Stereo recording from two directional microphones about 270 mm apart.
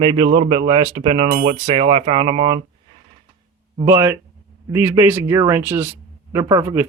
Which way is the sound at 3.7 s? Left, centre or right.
Centre.